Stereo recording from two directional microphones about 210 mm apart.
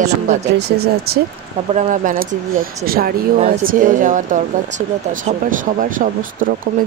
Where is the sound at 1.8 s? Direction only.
40° right (ahead or behind).